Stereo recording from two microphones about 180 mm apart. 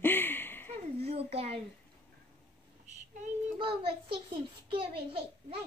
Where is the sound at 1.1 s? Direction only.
35° right (ahead or behind).